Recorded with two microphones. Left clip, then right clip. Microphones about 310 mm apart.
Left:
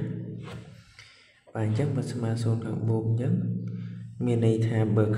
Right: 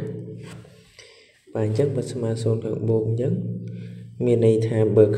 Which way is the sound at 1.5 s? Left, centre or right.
Centre.